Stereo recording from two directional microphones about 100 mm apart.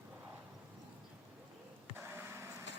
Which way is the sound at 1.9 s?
25° right (ahead or behind).